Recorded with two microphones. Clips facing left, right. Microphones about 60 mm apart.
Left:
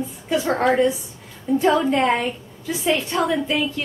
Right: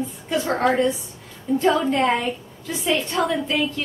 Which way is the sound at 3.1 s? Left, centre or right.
Centre.